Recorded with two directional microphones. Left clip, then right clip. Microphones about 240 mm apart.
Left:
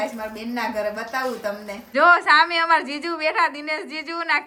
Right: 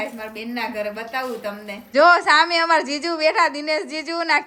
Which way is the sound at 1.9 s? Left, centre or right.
Centre.